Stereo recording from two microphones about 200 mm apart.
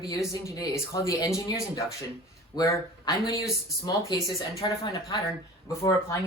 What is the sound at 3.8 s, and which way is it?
Speech, 20° left (ahead or behind).